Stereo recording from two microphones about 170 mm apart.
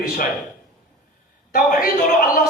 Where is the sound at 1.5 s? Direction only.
55° left (ahead or behind).